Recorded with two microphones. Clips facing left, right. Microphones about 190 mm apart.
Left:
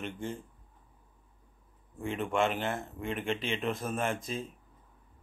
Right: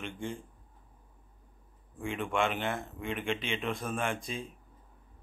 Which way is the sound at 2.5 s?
40° left (ahead or behind).